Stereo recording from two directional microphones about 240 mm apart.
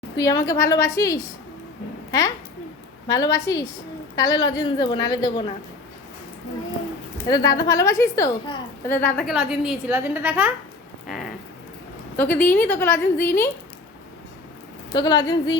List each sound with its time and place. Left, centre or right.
0.2 s a woman's voice: centre
3.1 s a woman's voice: centre
7.3 s a woman's voice: centre
11.0 s a sound: centre
12.1 s a woman's voice: centre
14.9 s a woman's voice: centre